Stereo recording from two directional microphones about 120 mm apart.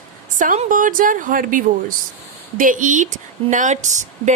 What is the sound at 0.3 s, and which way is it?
Speech, 85° right.